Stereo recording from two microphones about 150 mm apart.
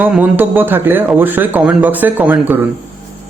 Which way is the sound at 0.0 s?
10° right (ahead or behind).